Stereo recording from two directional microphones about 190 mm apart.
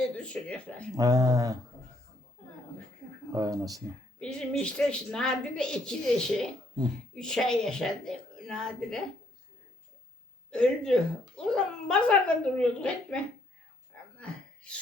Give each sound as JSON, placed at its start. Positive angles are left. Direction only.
{"t": 0.2, "sound": "speech", "side_deg": 5}
{"t": 0.9, "sound": "speech", "side_deg": -20}
{"t": 3.3, "sound": "speech", "side_deg": -20}
{"t": 4.2, "sound": "speech", "side_deg": 5}
{"t": 10.5, "sound": "speech", "side_deg": 5}
{"t": 14.2, "sound": "a sound", "side_deg": 5}